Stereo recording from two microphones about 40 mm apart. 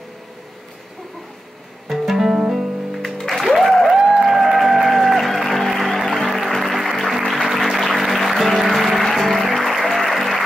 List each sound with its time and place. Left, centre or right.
1.9 s music: centre
3.7 s a sound: centre
4.0 s music: centre
4.3 s music: centre